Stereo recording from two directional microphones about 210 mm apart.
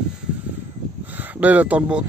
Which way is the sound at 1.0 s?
10° right (ahead or behind).